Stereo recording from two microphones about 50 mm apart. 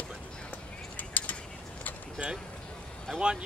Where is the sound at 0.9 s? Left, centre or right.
Left.